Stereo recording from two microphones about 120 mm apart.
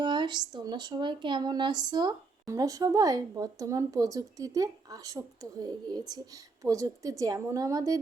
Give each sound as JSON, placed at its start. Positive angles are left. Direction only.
{"t": 0.0, "sound": "speech", "side_deg": -40}